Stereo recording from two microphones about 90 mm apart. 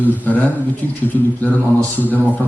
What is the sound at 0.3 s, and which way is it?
A man's voice, 20° left (ahead or behind).